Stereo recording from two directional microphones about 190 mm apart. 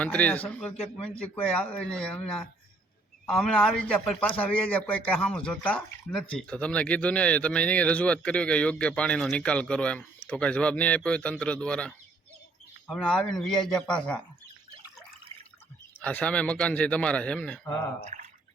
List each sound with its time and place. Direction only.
0.0 s a man's voice: 5° left (ahead or behind)
16.0 s speech: 5° left (ahead or behind)
18.0 s drip: 40° right (ahead or behind)